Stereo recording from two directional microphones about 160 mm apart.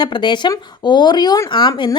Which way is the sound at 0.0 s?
30° left (ahead or behind).